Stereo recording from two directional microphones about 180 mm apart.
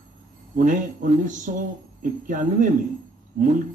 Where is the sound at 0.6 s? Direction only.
45° right (ahead or behind).